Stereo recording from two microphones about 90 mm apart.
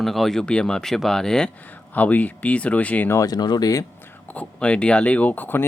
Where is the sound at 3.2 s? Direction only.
50° left (ahead or behind).